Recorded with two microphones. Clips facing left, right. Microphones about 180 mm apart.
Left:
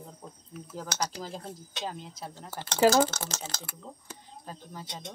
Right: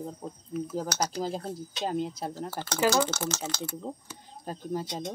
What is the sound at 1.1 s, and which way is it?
Speech, 35° right (ahead or behind).